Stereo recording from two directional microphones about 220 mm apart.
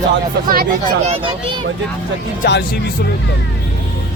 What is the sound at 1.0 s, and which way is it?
Speech, 25° right (ahead or behind).